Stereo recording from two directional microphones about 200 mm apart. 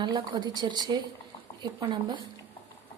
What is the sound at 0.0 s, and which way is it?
Speech, 20° right (ahead or behind).